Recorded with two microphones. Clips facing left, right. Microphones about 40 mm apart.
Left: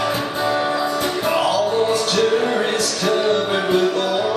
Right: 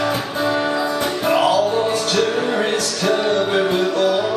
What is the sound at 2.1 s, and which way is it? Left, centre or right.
Music, centre.